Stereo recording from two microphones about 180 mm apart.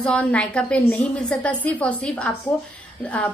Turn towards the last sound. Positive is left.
turn(degrees=5)  # may be behind; listen again after turning